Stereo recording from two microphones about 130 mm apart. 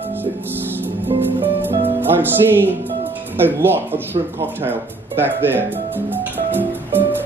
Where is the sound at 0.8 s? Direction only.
15° right (ahead or behind).